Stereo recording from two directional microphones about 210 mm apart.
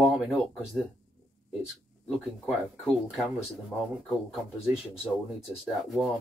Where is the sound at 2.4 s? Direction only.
Centre (ahead or behind).